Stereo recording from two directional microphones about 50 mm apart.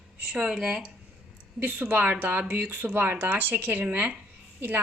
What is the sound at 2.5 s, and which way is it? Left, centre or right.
Speech, right.